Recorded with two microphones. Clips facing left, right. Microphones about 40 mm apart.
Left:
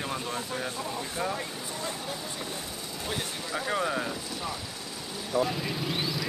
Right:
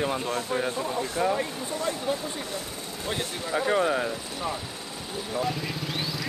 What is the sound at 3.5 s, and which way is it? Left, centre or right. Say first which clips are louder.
Speech: right 5 dB; right.